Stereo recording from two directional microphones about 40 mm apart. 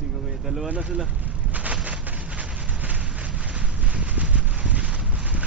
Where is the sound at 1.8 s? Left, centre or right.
Right.